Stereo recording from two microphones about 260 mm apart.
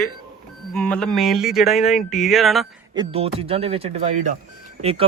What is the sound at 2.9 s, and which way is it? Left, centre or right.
Speech, right.